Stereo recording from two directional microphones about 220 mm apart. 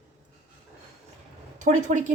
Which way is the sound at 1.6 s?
35° right (ahead or behind).